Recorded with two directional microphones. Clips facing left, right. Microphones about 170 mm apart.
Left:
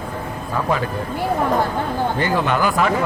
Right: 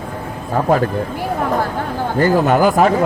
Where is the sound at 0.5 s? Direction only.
45° right (ahead or behind).